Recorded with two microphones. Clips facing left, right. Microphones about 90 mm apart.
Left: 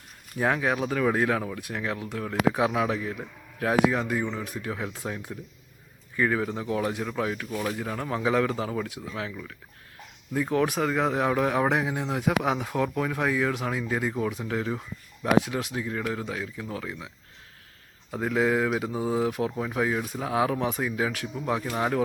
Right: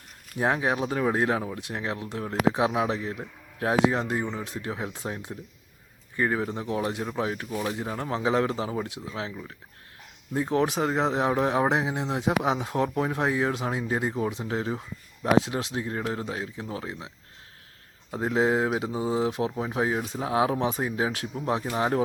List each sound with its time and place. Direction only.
0.3 s speech: 20° right (ahead or behind)
4.2 s speech: 10° right (ahead or behind)
4.5 s speech: 20° right (ahead or behind)
6.4 s speech: 5° right (ahead or behind)
6.7 s speech: 15° right (ahead or behind)
18.2 s speech: 25° right (ahead or behind); by 19.2 s 10° right (ahead or behind)
19.5 s speech: 25° right (ahead or behind)
20.1 s speech: 10° right (ahead or behind)
20.5 s speech: 25° right (ahead or behind)
21.7 s speech: 10° right (ahead or behind)